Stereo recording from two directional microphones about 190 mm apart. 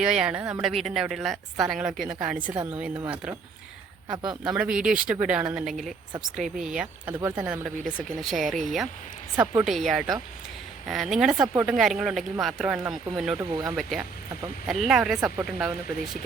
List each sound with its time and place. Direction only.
0.0 s speech: 5° right (ahead or behind)
4.1 s speech: 20° right (ahead or behind)
4.4 s speech: 5° right (ahead or behind)
9.3 s speech: 10° right (ahead or behind)
9.6 s speech: centre (ahead or behind)